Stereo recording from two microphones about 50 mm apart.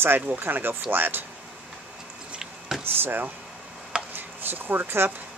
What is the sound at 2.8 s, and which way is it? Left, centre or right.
Speech, right.